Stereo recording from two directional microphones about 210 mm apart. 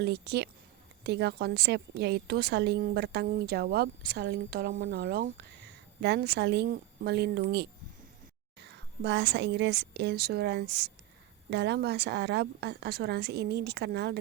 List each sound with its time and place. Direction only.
0.0 s a woman's voice: 50° right (ahead or behind)